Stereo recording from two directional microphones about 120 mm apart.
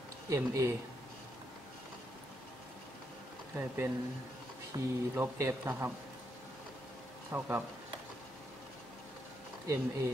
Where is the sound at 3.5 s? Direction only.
15° right (ahead or behind).